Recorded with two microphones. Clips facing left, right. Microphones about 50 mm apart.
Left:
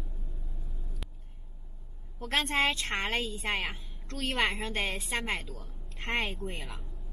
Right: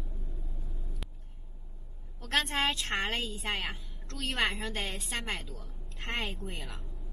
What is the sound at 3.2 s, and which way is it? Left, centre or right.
Speech, centre.